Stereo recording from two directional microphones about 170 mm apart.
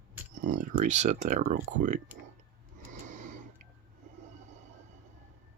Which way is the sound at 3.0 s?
50° right (ahead or behind).